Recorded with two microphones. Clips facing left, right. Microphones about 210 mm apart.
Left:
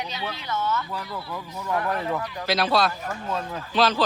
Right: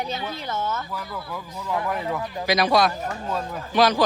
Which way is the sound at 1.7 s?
15° right (ahead or behind).